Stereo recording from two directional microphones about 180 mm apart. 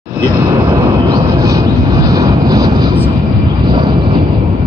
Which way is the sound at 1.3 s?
20° right (ahead or behind).